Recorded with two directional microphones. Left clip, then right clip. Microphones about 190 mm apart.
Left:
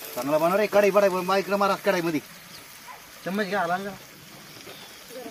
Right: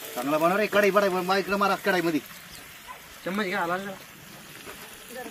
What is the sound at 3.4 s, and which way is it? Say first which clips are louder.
Speech: left 2 dB; 20° left (ahead or behind).